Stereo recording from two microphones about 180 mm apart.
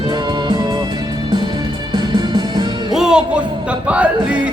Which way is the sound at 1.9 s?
25° right (ahead or behind).